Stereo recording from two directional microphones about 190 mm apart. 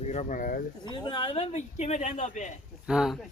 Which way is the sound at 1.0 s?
25° left (ahead or behind).